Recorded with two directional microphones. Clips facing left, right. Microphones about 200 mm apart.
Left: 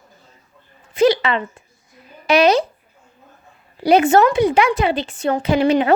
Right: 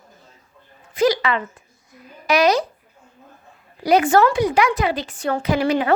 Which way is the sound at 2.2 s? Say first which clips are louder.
Left 3 dB; 25° left (ahead or behind).